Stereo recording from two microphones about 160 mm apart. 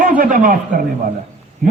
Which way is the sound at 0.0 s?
60° right (ahead or behind).